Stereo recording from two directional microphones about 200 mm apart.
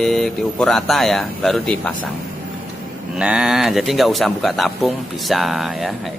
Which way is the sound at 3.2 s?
5° right (ahead or behind).